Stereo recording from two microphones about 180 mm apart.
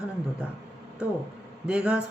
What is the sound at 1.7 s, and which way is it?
Speech, 5° right (ahead or behind).